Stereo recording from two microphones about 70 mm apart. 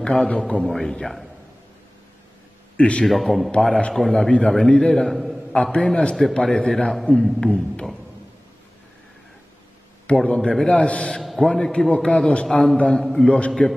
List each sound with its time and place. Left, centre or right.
0.0 s a man's voice: centre
0.7 s speech: centre
2.8 s a man's voice: centre
3.1 s a man's voice: centre
5.0 s a sound: centre
5.5 s a man's voice: centre
10.0 s a man's voice: centre
11.1 s a sound: centre
11.4 s a man's voice: centre
12.4 s a man's voice: centre